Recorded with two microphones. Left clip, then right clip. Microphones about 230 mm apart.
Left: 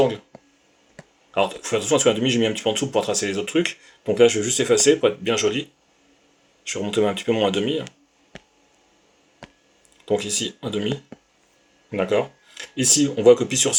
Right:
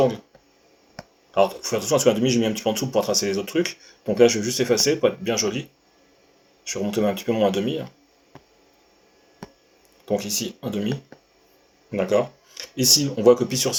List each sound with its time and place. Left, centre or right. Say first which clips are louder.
1.3 s speech: right 1 dB; left
6.7 s speech: left 2 dB; left
10.1 s speech: left 2 dB; left
11.9 s speech: even; left